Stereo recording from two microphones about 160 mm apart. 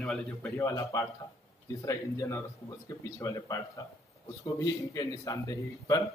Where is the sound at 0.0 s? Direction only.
Centre (ahead or behind).